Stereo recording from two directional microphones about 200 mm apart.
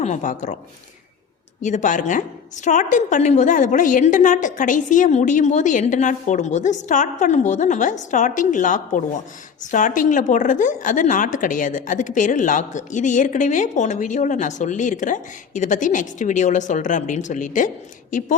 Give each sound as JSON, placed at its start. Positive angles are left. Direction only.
{"t": 0.0, "sound": "a woman's voice", "side_deg": 35}
{"t": 1.6, "sound": "a woman's voice", "side_deg": 40}